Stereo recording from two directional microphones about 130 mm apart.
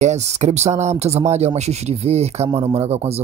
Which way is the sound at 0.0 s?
60° right (ahead or behind).